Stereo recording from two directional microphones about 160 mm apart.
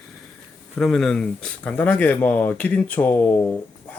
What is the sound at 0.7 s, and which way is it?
Speech, 5° left (ahead or behind).